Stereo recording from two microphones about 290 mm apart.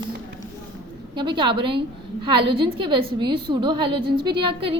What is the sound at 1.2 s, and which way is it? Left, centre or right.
A woman's voice, centre.